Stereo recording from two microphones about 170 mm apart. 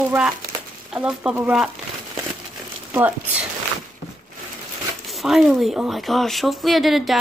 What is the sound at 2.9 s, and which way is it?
Speech, 10° right (ahead or behind).